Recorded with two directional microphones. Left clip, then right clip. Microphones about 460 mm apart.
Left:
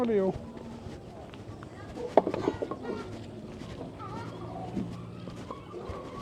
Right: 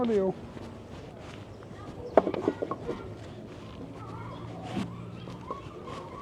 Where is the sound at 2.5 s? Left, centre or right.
Left.